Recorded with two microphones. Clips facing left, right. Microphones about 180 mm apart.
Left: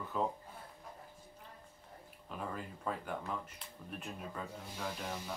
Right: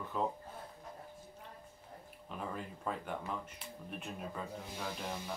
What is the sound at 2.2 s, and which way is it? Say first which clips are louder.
Speech: even; centre (ahead or behind).